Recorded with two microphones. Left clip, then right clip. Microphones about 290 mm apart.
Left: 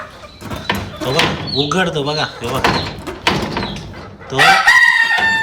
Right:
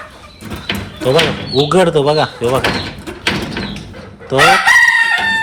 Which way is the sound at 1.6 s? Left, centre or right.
Centre.